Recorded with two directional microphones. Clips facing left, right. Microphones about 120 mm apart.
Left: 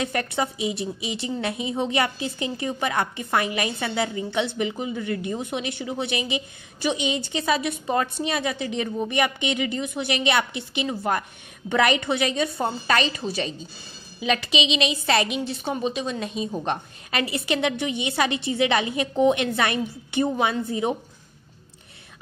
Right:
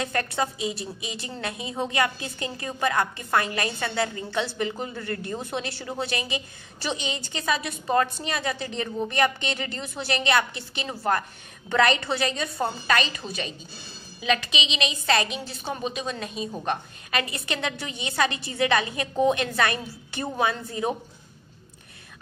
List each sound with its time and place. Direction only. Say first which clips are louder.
0.0 s a woman's voice: left 1 dB; 20° left (ahead or behind)